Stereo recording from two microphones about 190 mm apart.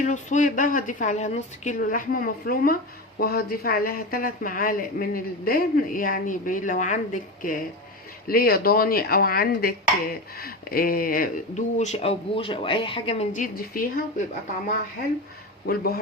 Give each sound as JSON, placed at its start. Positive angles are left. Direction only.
{"t": 0.0, "sound": "speech", "side_deg": 40}
{"t": 15.6, "sound": "speech", "side_deg": 55}